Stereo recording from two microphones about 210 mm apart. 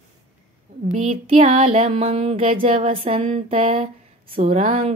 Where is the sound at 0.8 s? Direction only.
30° right (ahead or behind).